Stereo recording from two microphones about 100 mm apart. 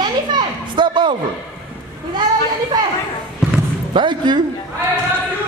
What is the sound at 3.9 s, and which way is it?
Speech, 50° right (ahead or behind).